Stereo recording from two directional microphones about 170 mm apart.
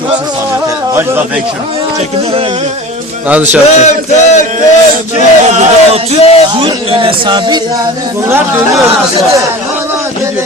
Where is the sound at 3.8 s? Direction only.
45° left (ahead or behind).